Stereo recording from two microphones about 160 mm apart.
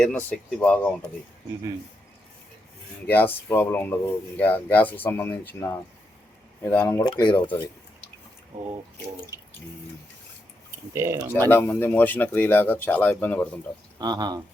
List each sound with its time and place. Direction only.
0.0 s speech: 5° left (ahead or behind)
3.1 s speech: 10° left (ahead or behind)
7.0 s speech: 30° left (ahead or behind)
10.9 s speech: 15° right (ahead or behind)
11.3 s speech: 15° left (ahead or behind)
14.0 s speech: 25° right (ahead or behind)